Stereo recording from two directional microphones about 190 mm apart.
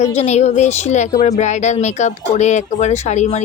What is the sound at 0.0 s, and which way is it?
Speech, 35° left (ahead or behind).